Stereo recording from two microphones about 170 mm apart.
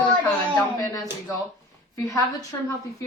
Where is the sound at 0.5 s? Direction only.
20° left (ahead or behind).